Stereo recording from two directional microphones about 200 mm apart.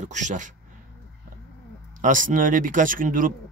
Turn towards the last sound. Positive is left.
turn(degrees=-45)  # may be behind; listen again after turning